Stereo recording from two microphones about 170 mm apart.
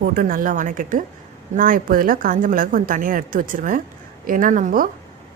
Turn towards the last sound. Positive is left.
turn(degrees=-50)  # may be behind; listen again after turning